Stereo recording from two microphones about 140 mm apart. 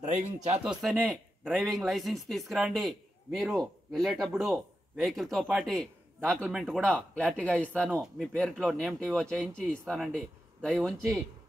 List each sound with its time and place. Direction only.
0.0 s speech: 55° right (ahead or behind)
0.7 s a man's voice: centre (ahead or behind)
7.9 s a man's voice: centre (ahead or behind)